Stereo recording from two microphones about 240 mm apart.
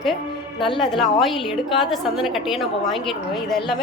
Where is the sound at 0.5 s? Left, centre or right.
Left.